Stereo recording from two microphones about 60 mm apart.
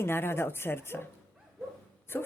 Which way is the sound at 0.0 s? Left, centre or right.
Left.